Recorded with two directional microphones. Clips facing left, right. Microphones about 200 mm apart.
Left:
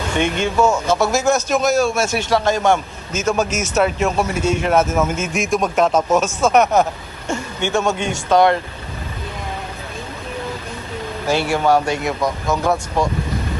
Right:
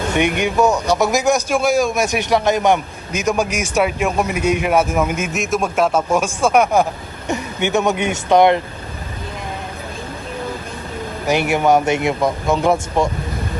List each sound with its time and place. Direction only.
0.2 s a man's voice: 15° right (ahead or behind)
11.3 s speech: 15° right (ahead or behind)